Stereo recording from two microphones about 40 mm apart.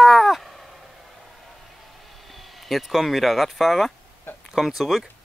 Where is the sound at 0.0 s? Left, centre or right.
Centre.